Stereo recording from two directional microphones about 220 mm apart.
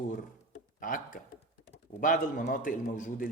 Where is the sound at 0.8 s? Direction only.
40° left (ahead or behind).